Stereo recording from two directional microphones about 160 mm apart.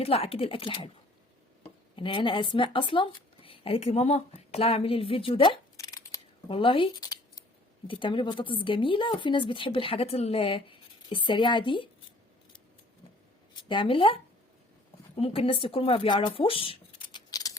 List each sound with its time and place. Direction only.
0.0 s a woman's voice: 40° left (ahead or behind)
2.0 s speech: 30° left (ahead or behind)
6.5 s a woman's voice: 35° left (ahead or behind)
13.7 s a woman's voice: 30° left (ahead or behind)